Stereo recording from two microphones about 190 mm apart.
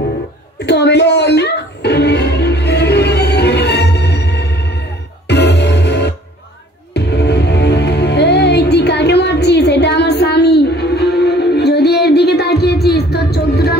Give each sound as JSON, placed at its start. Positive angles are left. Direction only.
{"t": 0.7, "sound": "music", "side_deg": 60}